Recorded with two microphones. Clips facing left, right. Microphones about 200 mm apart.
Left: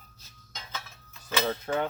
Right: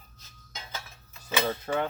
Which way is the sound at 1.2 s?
10° right (ahead or behind).